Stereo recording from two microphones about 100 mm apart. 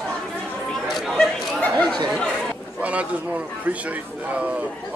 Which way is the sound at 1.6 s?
15° left (ahead or behind).